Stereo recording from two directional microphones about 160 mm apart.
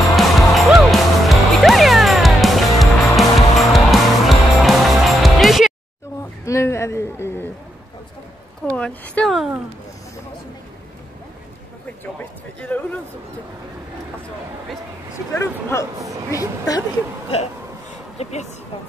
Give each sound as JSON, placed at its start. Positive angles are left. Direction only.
{"t": 0.1, "sound": "music", "side_deg": 0}
{"t": 6.4, "sound": "a sound", "side_deg": 15}
{"t": 8.6, "sound": "speech", "side_deg": 10}
{"t": 12.5, "sound": "speech", "side_deg": 10}
{"t": 15.3, "sound": "a woman's voice", "side_deg": 20}
{"t": 18.1, "sound": "a sound", "side_deg": 45}